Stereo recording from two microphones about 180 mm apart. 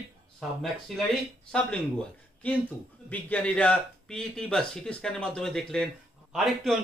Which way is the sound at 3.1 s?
10° left (ahead or behind).